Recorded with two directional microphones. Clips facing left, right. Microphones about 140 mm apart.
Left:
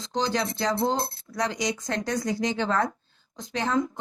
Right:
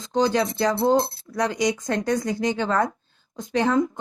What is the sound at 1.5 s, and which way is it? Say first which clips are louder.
Speech: right 5 dB; 55° right (ahead or behind).